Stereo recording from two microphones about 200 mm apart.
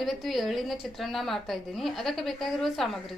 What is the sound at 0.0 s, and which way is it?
A woman's voice, centre (ahead or behind).